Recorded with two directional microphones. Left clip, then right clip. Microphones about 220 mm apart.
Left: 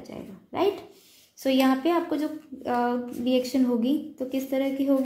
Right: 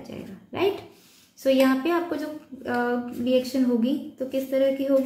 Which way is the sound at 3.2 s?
30° left (ahead or behind).